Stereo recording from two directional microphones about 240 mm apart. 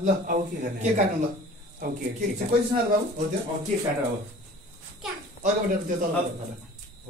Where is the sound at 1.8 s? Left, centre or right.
Right.